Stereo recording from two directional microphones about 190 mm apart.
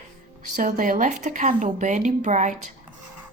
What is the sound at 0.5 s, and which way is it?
Speech, 45° right (ahead or behind).